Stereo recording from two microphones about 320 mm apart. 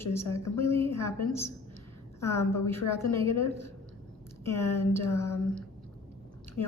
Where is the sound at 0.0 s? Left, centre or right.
Centre.